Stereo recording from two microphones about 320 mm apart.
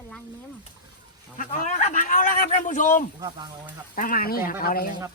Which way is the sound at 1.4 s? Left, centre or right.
Left.